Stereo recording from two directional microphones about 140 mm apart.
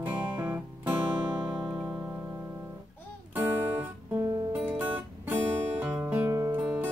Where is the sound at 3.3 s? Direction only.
15° right (ahead or behind).